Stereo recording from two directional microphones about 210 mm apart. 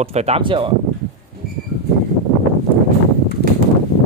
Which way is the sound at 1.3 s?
45° right (ahead or behind).